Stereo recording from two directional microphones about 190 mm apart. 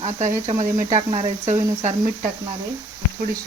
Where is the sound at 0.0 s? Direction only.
40° right (ahead or behind).